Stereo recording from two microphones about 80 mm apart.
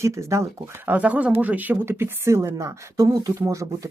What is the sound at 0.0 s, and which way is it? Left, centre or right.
Speech, right.